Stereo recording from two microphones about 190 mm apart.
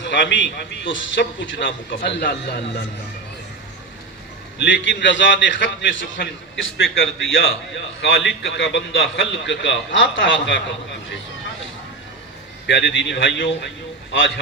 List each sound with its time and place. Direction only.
0.0 s a man's voice: 70° left (ahead or behind)
4.6 s a man's voice: 75° left (ahead or behind)
12.6 s a man's voice: 70° left (ahead or behind)